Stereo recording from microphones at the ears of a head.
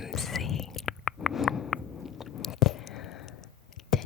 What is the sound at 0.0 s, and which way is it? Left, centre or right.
Whispering, left.